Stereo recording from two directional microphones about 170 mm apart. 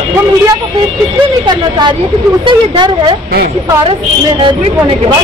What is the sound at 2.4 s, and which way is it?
Speech, 30° right (ahead or behind).